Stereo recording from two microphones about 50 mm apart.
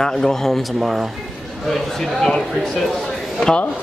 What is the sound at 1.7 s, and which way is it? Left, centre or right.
Speech, centre.